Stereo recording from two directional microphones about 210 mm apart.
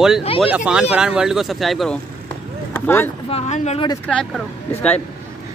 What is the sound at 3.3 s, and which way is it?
Speech, 30° left (ahead or behind).